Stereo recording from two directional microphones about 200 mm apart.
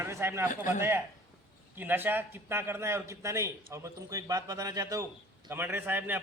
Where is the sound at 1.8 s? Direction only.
10° right (ahead or behind).